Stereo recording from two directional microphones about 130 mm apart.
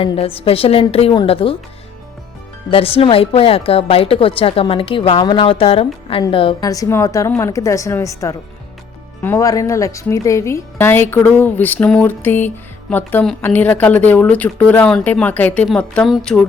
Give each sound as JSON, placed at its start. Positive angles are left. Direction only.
{"t": 0.0, "sound": "speech", "side_deg": 45}
{"t": 2.6, "sound": "speech", "side_deg": 45}
{"t": 6.6, "sound": "a woman's voice", "side_deg": 25}
{"t": 16.1, "sound": "a sound", "side_deg": 5}